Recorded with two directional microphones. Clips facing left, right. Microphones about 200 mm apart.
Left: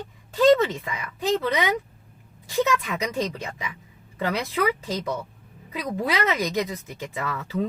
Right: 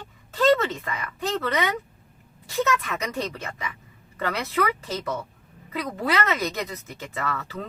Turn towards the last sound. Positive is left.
turn(degrees=15)  # may be behind; listen again after turning